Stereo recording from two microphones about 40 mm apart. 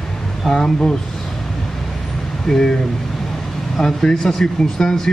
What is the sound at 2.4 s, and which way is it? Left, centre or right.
Speech, centre.